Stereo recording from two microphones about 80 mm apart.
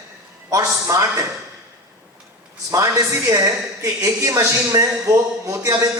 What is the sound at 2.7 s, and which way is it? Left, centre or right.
A woman's voice, right.